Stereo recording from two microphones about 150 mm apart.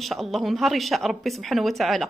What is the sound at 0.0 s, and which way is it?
Speech, centre (ahead or behind).